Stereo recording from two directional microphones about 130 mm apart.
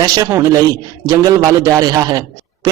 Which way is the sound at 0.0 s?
30° right (ahead or behind).